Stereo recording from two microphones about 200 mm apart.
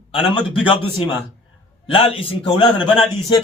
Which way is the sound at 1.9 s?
30° left (ahead or behind).